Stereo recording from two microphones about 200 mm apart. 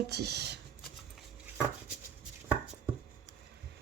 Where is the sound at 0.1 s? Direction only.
55° right (ahead or behind).